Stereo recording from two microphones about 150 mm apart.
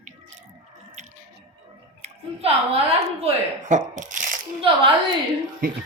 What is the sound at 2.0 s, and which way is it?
Chewing, 45° right (ahead or behind).